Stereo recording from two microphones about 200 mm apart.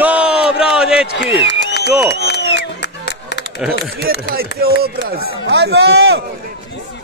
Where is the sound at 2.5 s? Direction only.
60° left (ahead or behind).